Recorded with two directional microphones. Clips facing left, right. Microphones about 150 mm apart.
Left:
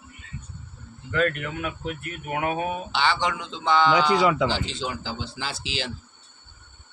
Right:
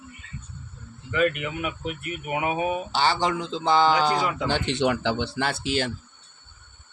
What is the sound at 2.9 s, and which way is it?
Speech, 40° right (ahead or behind).